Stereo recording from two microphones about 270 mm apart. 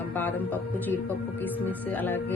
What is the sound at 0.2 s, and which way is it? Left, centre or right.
Music, centre.